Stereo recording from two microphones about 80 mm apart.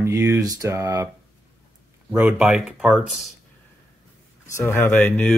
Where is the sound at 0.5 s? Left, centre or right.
Right.